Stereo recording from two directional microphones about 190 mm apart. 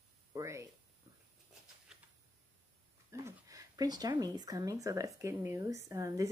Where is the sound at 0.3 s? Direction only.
15° right (ahead or behind).